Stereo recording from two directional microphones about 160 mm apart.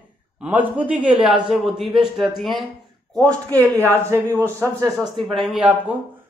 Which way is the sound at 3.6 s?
20° right (ahead or behind).